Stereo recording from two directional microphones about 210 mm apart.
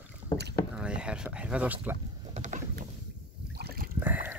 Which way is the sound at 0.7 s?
5° right (ahead or behind).